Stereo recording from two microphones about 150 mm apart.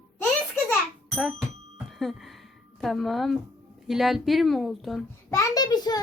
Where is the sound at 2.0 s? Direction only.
Centre (ahead or behind).